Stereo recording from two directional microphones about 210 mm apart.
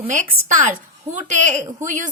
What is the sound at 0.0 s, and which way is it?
A woman's voice, 35° right (ahead or behind).